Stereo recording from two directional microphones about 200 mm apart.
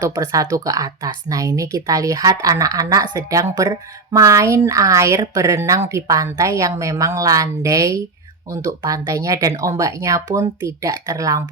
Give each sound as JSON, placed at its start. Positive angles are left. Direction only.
{"t": 0.0, "sound": "speech", "side_deg": -15}